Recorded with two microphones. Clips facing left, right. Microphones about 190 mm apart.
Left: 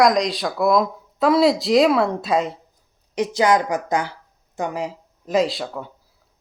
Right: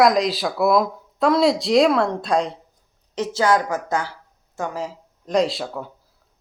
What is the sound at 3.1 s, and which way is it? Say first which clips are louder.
A woman's voice: left 1 dB; 15° left (ahead or behind).